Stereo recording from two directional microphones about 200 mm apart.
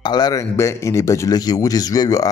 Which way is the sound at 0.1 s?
15° left (ahead or behind).